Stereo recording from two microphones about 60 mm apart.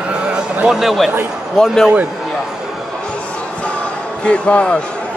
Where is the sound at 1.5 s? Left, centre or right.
Centre.